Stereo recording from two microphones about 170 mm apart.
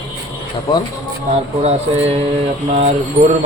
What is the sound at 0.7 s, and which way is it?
Speech, 25° left (ahead or behind).